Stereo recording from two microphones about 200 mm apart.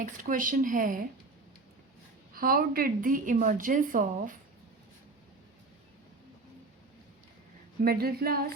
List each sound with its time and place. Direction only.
0.0 s a woman's voice: 40° right (ahead or behind)
2.3 s a woman's voice: 45° right (ahead or behind)
7.8 s a woman's voice: 50° right (ahead or behind)